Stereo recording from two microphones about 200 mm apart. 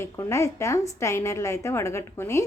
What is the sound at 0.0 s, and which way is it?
A woman's voice, 15° left (ahead or behind).